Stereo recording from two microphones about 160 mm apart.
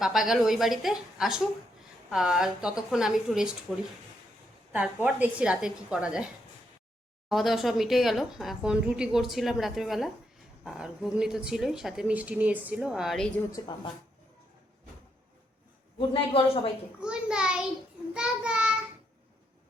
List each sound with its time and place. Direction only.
0.0 s a woman's voice: centre (ahead or behind)
5.0 s a woman's voice: 10° right (ahead or behind)
13.5 s a woman's voice: 30° left (ahead or behind)
16.0 s speech: 35° left (ahead or behind)
17.0 s a woman's voice: 5° right (ahead or behind)